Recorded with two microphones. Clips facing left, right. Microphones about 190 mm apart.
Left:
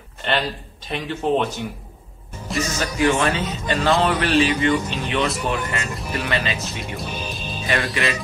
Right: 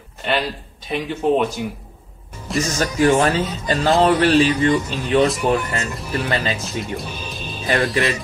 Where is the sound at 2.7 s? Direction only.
40° right (ahead or behind).